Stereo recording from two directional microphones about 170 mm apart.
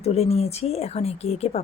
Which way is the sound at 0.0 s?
35° left (ahead or behind).